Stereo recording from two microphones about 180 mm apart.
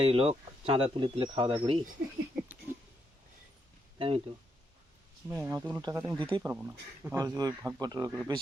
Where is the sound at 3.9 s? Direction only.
30° right (ahead or behind).